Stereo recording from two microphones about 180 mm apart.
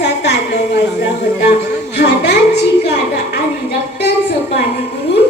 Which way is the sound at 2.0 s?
70° left (ahead or behind).